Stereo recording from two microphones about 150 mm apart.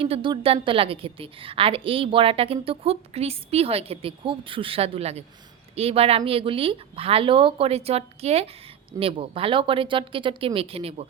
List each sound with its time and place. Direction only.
0.0 s a woman's voice: 35° right (ahead or behind)